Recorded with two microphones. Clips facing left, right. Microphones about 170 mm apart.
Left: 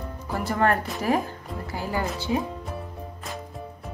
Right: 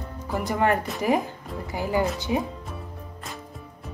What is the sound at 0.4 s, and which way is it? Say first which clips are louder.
Speech: even; 15° right (ahead or behind).